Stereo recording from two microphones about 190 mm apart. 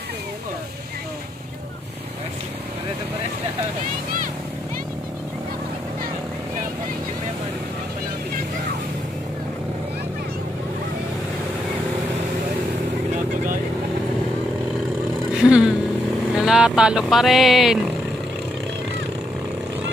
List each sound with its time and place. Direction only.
15.4 s vehicle: 5° right (ahead or behind)
16.3 s speech: 5° right (ahead or behind)